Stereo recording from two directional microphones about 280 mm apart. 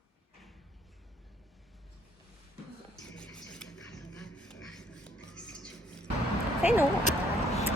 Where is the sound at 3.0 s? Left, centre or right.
Centre.